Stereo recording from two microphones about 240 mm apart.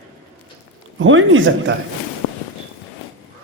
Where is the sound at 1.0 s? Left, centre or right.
Right.